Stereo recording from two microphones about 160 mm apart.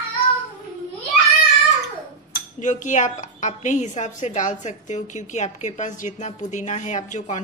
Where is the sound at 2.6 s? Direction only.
50° left (ahead or behind).